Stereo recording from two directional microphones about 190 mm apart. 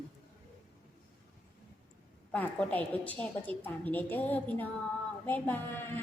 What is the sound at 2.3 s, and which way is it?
A woman's voice, 10° left (ahead or behind).